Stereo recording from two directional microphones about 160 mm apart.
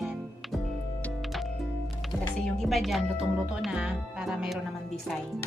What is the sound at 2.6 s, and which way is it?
Speech, centre (ahead or behind).